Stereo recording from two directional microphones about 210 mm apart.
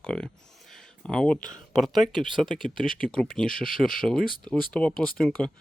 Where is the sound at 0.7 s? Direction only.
5° left (ahead or behind).